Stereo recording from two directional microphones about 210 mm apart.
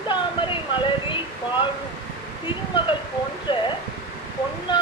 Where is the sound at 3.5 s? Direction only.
25° left (ahead or behind).